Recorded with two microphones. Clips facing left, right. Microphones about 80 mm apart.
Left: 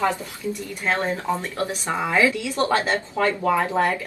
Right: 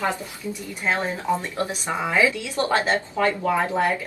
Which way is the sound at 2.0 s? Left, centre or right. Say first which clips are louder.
Left 1 dB; centre.